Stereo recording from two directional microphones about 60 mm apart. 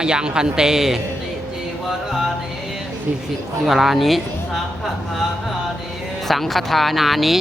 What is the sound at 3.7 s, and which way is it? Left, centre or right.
Speech, centre.